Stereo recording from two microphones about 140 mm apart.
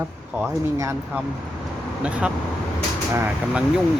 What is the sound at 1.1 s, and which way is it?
Speech, 15° right (ahead or behind).